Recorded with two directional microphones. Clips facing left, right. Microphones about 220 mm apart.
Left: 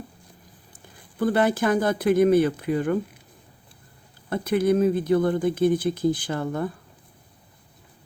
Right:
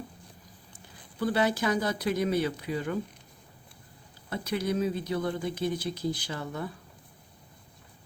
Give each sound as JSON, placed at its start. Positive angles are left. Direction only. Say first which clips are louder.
{"t": 1.2, "sound": "speech", "louder": "left 6 dB", "side_deg": 50}
{"t": 4.3, "sound": "speech", "louder": "left 9 dB", "side_deg": 50}